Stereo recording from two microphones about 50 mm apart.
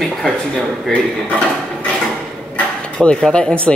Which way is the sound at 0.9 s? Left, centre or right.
Left.